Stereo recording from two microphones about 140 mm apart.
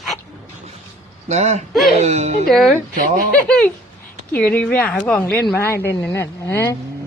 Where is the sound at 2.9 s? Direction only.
90° right.